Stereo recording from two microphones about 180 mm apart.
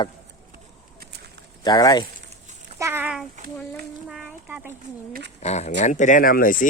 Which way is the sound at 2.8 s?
10° right (ahead or behind).